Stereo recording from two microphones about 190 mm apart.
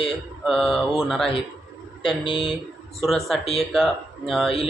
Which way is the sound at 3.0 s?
Centre (ahead or behind).